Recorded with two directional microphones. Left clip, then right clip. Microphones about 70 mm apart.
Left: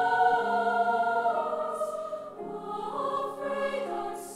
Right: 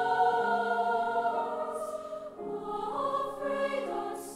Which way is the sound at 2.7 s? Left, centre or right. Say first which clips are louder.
Left 1 dB; centre.